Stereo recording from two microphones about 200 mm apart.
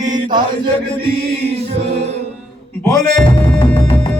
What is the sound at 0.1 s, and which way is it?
Mantra, 20° right (ahead or behind).